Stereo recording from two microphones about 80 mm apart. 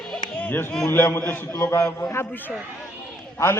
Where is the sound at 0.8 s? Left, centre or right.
Left.